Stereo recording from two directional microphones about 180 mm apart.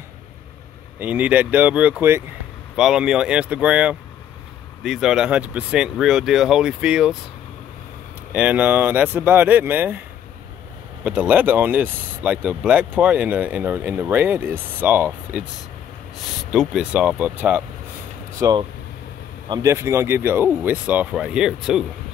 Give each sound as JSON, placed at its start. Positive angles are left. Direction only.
{"t": 0.9, "sound": "speech", "side_deg": -10}
{"t": 8.3, "sound": "speech", "side_deg": -5}
{"t": 11.1, "sound": "speech", "side_deg": -10}
{"t": 16.5, "sound": "speech", "side_deg": -5}
{"t": 18.4, "sound": "speech", "side_deg": -25}